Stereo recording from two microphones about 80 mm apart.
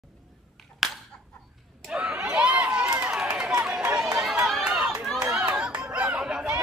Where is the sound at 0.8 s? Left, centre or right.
Centre.